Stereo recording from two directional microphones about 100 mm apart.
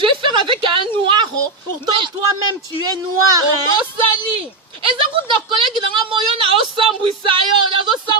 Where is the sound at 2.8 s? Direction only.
40° right (ahead or behind).